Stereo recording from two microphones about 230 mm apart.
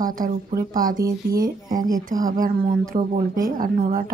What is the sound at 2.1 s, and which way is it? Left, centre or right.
Speech, right.